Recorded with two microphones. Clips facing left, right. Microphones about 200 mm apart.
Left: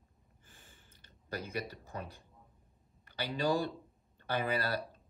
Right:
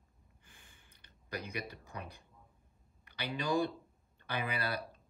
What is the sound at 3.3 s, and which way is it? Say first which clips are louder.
Speech: left 1 dB; 35° left (ahead or behind).